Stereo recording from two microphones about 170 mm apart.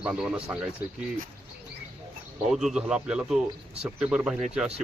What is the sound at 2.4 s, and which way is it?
Speech, centre (ahead or behind).